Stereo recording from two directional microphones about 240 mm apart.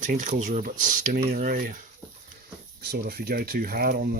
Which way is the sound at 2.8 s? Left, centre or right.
Right.